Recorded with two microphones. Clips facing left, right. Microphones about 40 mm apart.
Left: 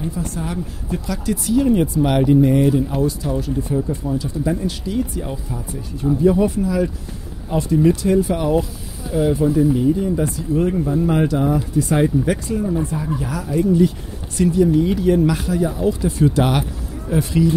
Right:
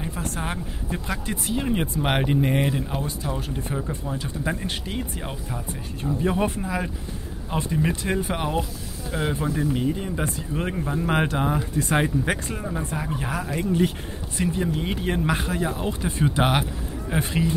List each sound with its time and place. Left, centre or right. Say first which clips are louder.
0.1 s speech: left 4 dB; right
0.9 s speech: left 7 dB; right
2.0 s speech: left 7 dB; right
6.2 s speech: left 8 dB; right
14.3 s speech: left 8 dB; right
14.6 s speech: left 10 dB; right